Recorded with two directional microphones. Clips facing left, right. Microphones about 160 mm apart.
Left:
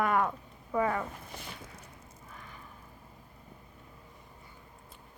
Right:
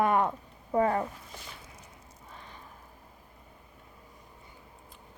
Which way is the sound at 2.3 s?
30° right (ahead or behind).